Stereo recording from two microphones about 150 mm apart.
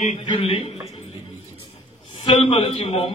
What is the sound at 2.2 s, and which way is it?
Speech, 35° left (ahead or behind).